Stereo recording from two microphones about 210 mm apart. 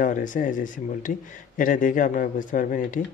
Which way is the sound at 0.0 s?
40° left (ahead or behind).